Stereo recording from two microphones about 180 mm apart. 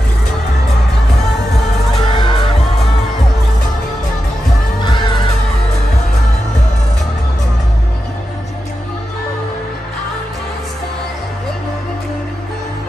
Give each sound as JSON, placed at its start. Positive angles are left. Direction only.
{"t": 2.0, "sound": "music", "side_deg": 25}
{"t": 4.8, "sound": "music", "side_deg": 25}